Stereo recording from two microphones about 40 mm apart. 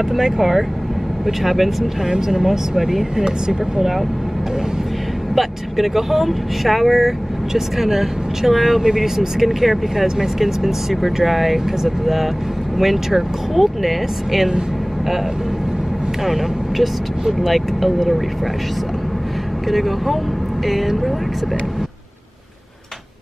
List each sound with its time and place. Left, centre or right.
0.1 s speech: centre
2.0 s speech: centre
3.3 s speech: centre
5.3 s speech: centre
16.3 s speech: centre
17.6 s speech: centre
19.7 s speech: centre